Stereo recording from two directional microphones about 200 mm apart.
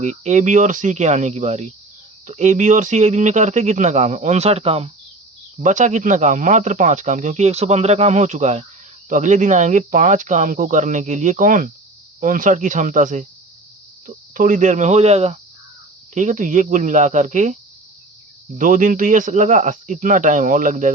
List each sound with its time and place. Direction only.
0.0 s speech: 35° right (ahead or behind)
14.3 s speech: 40° right (ahead or behind)